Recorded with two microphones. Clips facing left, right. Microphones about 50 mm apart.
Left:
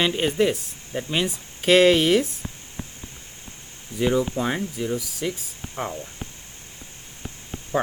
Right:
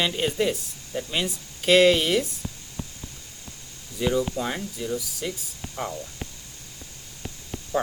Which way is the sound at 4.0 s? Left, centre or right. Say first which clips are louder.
Left 3 dB; left.